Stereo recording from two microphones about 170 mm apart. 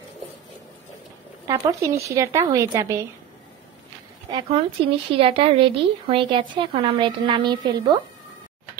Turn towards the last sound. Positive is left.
turn(degrees=-25)  # may be behind; listen again after turning